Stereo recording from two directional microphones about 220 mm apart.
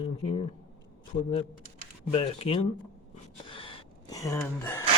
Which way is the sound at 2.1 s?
25° left (ahead or behind).